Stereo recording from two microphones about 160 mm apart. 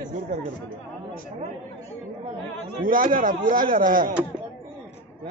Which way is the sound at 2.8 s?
55° right (ahead or behind).